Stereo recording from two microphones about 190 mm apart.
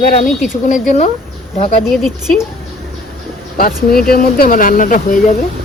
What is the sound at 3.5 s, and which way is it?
Speech, 50° left (ahead or behind).